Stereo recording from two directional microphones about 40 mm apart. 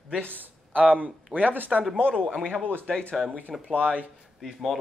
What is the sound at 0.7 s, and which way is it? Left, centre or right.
Speech, right.